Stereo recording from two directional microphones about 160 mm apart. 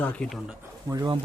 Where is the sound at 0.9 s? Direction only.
25° right (ahead or behind).